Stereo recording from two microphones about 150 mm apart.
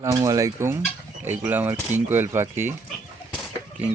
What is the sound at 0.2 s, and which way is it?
Fowl, 20° right (ahead or behind).